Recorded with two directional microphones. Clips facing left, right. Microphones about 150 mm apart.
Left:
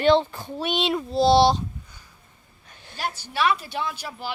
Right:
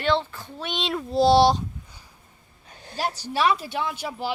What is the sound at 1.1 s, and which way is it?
Speech, 10° right (ahead or behind).